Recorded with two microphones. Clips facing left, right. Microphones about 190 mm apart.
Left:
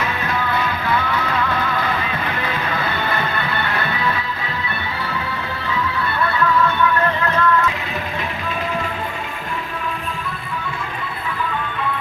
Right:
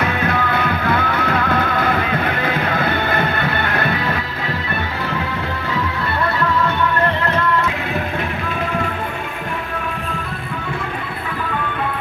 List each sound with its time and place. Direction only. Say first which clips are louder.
0.0 s music: right 4 dB; 60° right (ahead or behind)